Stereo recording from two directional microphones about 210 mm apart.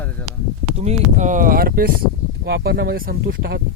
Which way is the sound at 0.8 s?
35° right (ahead or behind).